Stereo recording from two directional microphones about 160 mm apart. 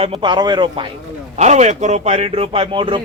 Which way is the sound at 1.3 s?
45° right (ahead or behind).